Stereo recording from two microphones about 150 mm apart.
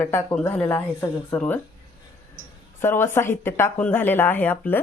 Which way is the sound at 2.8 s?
15° left (ahead or behind).